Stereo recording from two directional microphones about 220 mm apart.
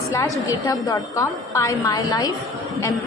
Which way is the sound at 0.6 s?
15° left (ahead or behind).